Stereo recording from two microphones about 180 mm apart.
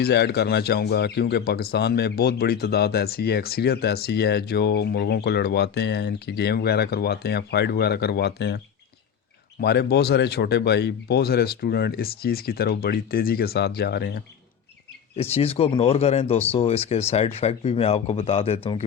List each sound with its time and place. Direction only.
0.0 s speech: 70° left (ahead or behind)
15.1 s speech: 35° left (ahead or behind)